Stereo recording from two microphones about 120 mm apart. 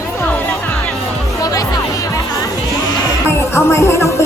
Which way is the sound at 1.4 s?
30° left (ahead or behind).